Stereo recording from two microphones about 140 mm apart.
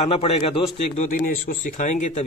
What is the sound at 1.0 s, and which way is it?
Speech, 85° left.